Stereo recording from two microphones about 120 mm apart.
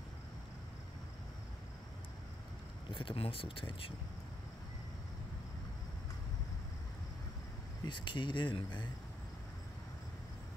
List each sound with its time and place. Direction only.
2.9 s speech: 45° left (ahead or behind)
7.8 s speech: 40° left (ahead or behind)